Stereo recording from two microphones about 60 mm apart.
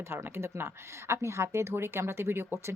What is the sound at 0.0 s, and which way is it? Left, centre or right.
Speech, right.